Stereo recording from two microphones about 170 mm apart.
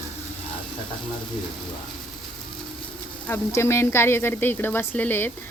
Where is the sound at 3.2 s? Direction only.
15° left (ahead or behind).